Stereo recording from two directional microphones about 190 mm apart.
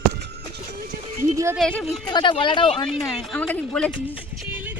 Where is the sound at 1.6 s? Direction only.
5° left (ahead or behind).